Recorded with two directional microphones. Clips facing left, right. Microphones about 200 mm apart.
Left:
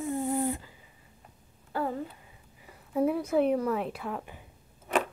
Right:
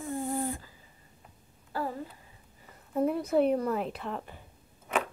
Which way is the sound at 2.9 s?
5° left (ahead or behind).